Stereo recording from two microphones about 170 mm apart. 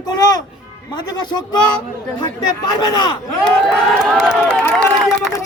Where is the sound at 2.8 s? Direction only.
25° left (ahead or behind).